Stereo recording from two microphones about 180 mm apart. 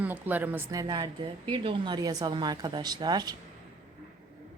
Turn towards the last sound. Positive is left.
turn(degrees=-25)  # may be behind; listen again after turning